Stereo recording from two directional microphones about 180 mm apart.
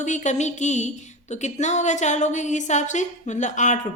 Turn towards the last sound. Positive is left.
turn(degrees=40)  # may be behind; listen again after turning